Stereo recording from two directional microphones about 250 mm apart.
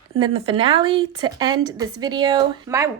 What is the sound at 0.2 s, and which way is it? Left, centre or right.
A woman's voice, right.